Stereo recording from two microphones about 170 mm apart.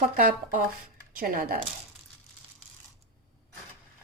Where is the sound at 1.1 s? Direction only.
55° right (ahead or behind).